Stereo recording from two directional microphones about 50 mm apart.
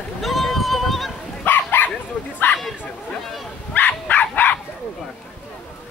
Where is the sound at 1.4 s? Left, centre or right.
Left.